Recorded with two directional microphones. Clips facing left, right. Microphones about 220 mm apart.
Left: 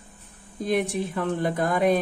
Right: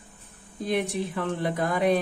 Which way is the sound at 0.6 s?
45° left (ahead or behind).